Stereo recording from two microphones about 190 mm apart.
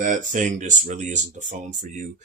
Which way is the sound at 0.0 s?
40° right (ahead or behind).